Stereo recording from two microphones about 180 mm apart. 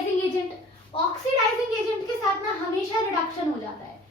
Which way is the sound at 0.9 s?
30° left (ahead or behind).